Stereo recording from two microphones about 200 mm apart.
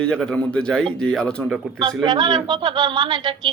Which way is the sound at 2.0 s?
20° right (ahead or behind).